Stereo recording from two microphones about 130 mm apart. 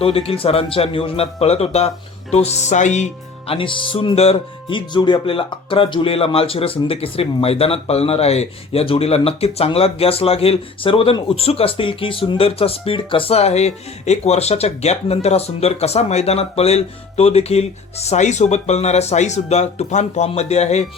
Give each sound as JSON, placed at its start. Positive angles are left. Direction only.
{"t": 0.0, "sound": "speech", "side_deg": 45}